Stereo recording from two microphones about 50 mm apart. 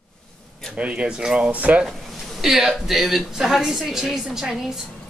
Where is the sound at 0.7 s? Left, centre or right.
Right.